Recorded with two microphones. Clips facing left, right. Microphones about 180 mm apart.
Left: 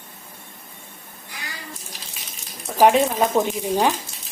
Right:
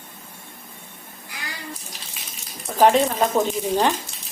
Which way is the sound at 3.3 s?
5° left (ahead or behind).